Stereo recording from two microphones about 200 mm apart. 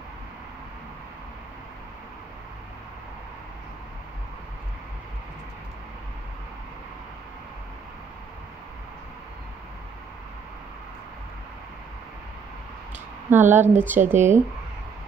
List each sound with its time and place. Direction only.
13.3 s a woman's voice: 10° right (ahead or behind)
14.1 s speech: 35° right (ahead or behind)